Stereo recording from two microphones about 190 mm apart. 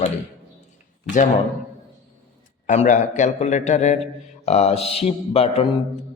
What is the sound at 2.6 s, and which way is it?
A man's voice, 40° left (ahead or behind).